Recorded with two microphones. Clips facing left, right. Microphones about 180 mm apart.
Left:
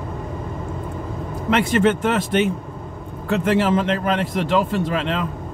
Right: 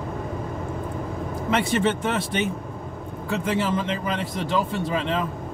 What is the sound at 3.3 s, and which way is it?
A man's voice, 75° left (ahead or behind).